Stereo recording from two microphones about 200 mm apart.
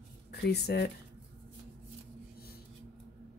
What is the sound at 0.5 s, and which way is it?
Speech, 55° left (ahead or behind).